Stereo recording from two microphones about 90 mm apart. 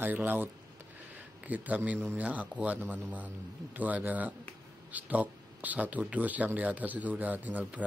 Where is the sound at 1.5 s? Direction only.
15° right (ahead or behind).